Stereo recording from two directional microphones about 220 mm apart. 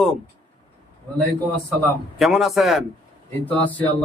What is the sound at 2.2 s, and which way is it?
Speech, centre (ahead or behind).